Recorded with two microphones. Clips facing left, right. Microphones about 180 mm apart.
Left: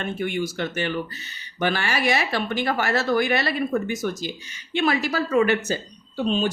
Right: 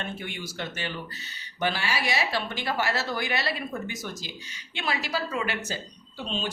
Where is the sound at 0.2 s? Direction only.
50° left (ahead or behind).